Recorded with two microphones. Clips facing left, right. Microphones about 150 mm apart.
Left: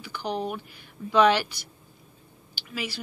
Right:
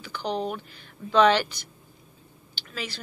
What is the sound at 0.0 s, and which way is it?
Speech, 10° left (ahead or behind).